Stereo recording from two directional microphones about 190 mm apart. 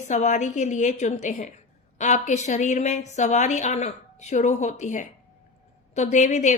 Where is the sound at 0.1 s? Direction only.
40° left (ahead or behind).